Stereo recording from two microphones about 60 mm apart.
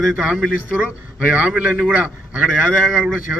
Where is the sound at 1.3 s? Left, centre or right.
Right.